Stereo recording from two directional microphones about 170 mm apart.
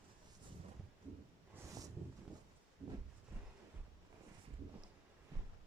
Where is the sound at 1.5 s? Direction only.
20° right (ahead or behind).